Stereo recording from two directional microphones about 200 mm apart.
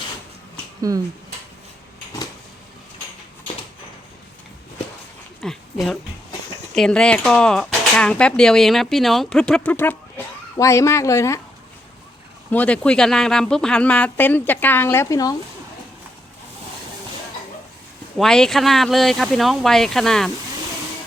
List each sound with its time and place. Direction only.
0.8 s speech: 15° right (ahead or behind)
5.4 s a sound: centre (ahead or behind)
6.7 s speech: 5° left (ahead or behind)
12.5 s speech: 5° left (ahead or behind)
18.2 s speech: 5° left (ahead or behind)